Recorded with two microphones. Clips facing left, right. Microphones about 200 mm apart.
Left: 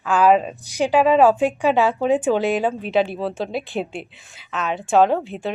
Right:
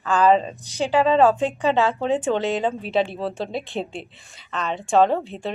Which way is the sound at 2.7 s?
Centre (ahead or behind).